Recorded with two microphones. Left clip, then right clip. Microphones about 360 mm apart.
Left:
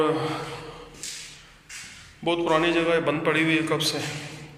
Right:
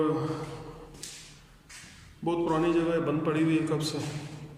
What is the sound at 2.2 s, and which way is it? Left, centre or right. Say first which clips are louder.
A man's voice: left 5 dB; centre.